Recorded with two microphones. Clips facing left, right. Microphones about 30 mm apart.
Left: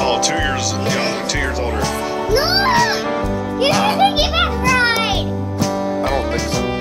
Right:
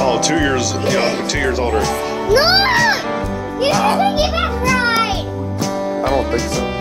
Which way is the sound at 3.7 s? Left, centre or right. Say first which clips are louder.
Right 3 dB; centre.